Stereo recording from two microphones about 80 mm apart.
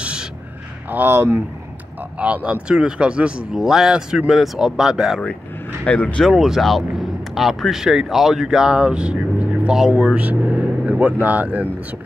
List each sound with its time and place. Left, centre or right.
0.0 s a sound: centre
0.8 s speech: right
2.1 s speech: centre
5.9 s speech: centre
6.3 s speech: centre